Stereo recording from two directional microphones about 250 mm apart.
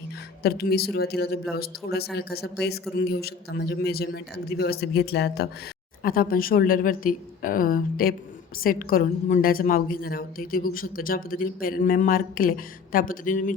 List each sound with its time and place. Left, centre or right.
0.4 s a woman's voice: left